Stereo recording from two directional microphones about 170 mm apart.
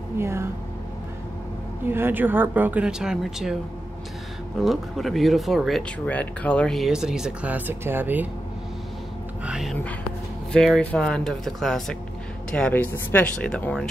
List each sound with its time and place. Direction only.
0.2 s a sound: 15° right (ahead or behind)
1.9 s speech: 10° right (ahead or behind)
4.6 s speech: centre (ahead or behind)
9.5 s speech: centre (ahead or behind)